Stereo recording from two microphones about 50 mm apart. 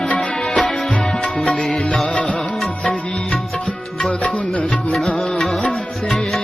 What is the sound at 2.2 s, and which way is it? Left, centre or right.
Music, centre.